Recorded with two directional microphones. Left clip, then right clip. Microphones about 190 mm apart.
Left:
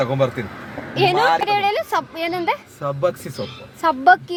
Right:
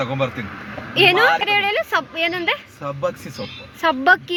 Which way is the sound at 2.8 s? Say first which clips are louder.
Left 7 dB; 15° left (ahead or behind).